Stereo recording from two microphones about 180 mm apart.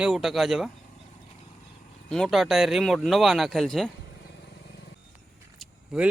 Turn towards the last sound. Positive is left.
turn(degrees=-5)  # may be behind; listen again after turning